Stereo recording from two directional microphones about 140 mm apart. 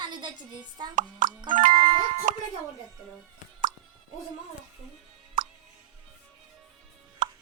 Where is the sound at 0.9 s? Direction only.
70° right (ahead or behind).